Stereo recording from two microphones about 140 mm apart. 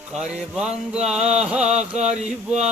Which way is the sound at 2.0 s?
55° right (ahead or behind).